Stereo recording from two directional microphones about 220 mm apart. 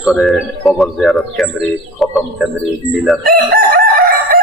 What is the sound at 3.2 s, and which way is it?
Chicken, 40° right (ahead or behind).